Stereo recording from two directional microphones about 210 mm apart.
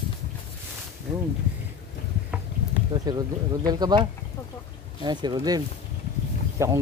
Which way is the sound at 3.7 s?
20° right (ahead or behind).